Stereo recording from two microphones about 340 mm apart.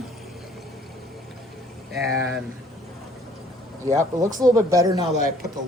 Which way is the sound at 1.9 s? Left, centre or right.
Right.